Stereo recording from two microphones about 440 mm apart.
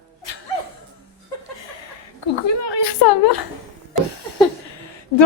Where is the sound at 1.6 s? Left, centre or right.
Left.